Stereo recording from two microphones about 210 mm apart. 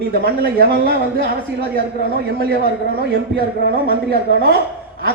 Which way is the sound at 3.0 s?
50° right (ahead or behind).